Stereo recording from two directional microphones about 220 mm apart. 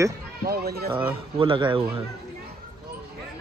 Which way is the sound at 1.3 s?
25° right (ahead or behind).